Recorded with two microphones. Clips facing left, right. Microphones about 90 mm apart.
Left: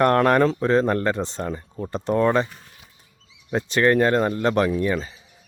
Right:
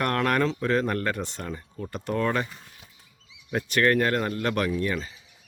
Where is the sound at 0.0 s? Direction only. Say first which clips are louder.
Left 7 dB; 35° left (ahead or behind).